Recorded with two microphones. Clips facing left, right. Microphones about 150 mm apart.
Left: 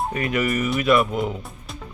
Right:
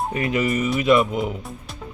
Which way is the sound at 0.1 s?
25° right (ahead or behind).